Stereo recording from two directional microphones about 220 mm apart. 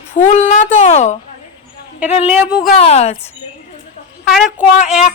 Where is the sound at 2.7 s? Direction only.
30° left (ahead or behind).